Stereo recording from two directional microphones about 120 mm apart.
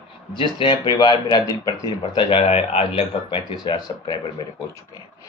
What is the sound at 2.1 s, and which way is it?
Speech, 45° left (ahead or behind).